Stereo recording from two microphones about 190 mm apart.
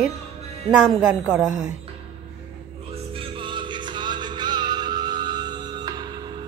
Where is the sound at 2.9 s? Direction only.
30° right (ahead or behind).